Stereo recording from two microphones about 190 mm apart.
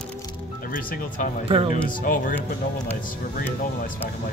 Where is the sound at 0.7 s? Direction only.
40° left (ahead or behind).